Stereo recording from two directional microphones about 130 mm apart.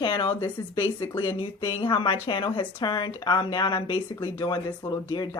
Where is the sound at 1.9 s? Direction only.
40° left (ahead or behind).